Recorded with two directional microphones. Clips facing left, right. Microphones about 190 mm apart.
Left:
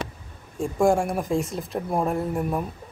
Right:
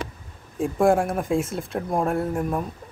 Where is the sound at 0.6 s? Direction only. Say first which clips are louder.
Right 1 dB; centre (ahead or behind).